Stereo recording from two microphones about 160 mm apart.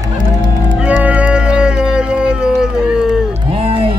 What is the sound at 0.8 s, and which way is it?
Music, 10° right (ahead or behind).